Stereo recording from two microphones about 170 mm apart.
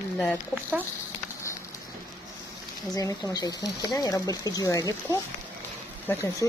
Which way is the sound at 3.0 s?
20° left (ahead or behind).